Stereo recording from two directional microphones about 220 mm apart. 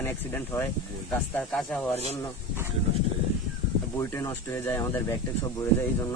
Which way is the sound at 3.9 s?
10° left (ahead or behind).